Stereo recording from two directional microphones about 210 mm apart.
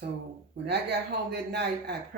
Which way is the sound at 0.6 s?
55° right (ahead or behind).